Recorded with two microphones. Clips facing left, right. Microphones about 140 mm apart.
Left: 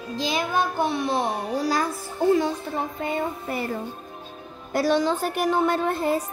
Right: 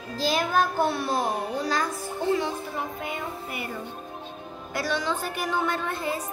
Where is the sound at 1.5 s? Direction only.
35° left (ahead or behind).